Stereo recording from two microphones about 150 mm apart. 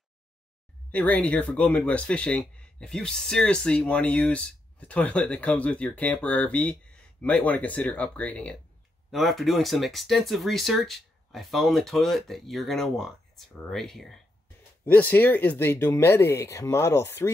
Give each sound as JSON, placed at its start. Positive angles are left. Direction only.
{"t": 0.9, "sound": "speech", "side_deg": 10}